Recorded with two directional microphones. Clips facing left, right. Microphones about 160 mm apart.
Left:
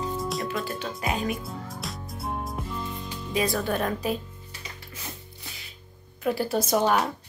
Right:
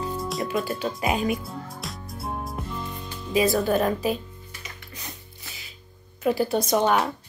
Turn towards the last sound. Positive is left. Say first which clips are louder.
# right 1 dB
turn(degrees=5)  # may be behind; listen again after turning